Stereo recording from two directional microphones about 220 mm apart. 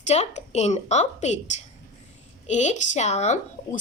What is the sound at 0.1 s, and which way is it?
A woman's voice, 30° left (ahead or behind).